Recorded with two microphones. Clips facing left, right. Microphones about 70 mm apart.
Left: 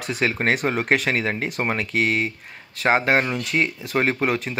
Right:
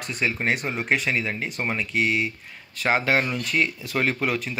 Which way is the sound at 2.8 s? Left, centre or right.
Left.